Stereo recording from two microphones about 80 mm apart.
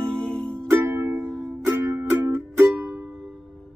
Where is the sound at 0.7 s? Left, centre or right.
Right.